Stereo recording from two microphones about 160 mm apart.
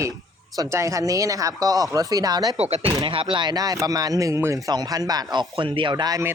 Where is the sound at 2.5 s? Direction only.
40° right (ahead or behind).